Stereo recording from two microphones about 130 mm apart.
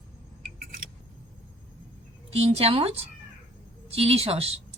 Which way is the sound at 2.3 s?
50° right (ahead or behind).